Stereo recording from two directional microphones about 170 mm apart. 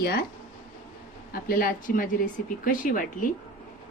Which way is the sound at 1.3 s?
60° left (ahead or behind).